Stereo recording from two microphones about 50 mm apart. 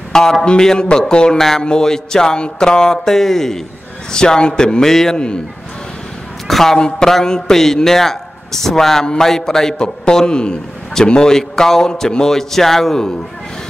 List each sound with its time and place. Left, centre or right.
0.1 s a man's voice: centre
6.4 s a man's voice: centre